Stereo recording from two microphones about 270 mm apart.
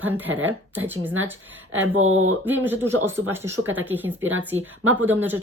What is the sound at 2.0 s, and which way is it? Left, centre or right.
Speech, right.